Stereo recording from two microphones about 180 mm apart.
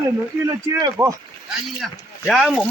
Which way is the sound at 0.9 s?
5° right (ahead or behind).